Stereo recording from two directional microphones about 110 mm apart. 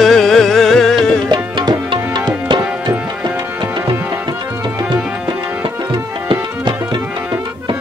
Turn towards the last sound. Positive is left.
turn(degrees=-45)  # may be behind; listen again after turning